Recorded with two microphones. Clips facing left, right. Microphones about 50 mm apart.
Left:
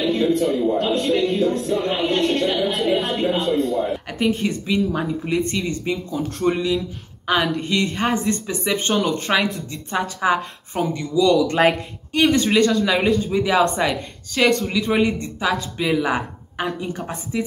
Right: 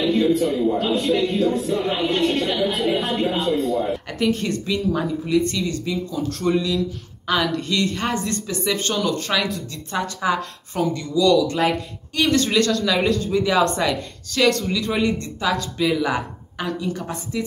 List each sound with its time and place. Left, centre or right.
0.0 s a man's voice: centre
5.4 s speech: left
11.3 s speech: left
12.1 s speech: left
16.6 s a woman's voice: left